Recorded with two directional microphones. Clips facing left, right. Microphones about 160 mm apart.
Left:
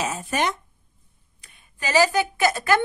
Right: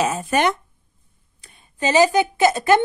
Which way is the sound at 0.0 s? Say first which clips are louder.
Right 6 dB; 60° right (ahead or behind).